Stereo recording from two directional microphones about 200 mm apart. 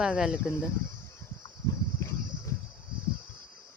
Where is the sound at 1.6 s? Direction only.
15° left (ahead or behind).